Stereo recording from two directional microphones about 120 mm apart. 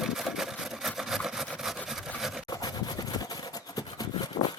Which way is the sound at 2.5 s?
35° left (ahead or behind).